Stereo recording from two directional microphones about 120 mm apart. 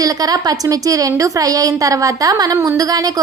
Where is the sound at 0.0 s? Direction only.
30° right (ahead or behind).